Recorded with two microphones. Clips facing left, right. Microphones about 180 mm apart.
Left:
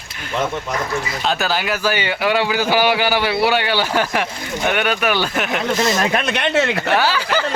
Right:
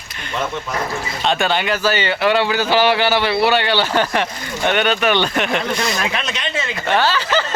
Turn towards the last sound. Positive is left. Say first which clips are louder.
# right 1 dB
turn(degrees=10)  # may be behind; listen again after turning